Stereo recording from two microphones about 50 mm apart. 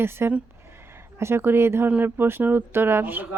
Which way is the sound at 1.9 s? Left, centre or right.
Right.